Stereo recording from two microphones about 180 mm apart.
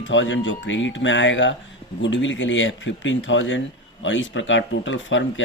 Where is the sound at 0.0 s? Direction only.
90° left.